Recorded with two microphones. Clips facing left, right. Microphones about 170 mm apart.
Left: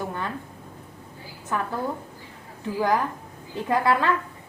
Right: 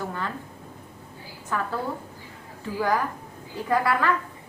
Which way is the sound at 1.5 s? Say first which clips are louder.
Left 1 dB; 20° left (ahead or behind).